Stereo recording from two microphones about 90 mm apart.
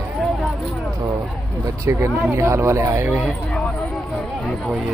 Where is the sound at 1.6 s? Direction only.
35° right (ahead or behind).